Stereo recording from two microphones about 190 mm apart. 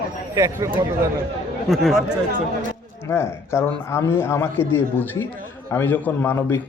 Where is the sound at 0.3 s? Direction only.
15° right (ahead or behind).